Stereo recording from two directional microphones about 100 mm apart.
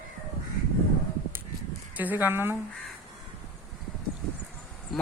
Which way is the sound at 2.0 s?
20° right (ahead or behind).